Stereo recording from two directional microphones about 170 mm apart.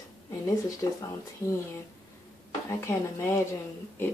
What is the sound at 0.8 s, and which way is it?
Speech, 20° left (ahead or behind).